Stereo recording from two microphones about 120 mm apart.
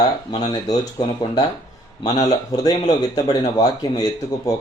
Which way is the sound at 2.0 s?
30° left (ahead or behind).